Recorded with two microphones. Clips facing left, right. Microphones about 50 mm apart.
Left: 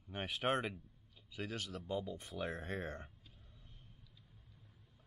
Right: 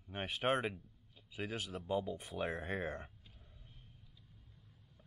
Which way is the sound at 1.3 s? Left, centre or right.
Centre.